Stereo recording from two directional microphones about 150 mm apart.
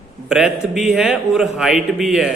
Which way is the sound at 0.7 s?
5° right (ahead or behind).